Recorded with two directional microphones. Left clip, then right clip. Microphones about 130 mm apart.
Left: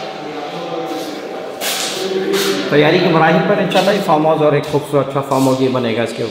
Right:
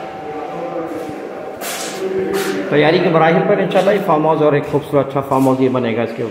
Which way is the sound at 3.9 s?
35° right (ahead or behind).